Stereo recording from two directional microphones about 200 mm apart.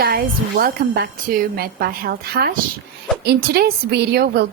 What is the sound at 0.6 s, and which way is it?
Speech, 50° right (ahead or behind).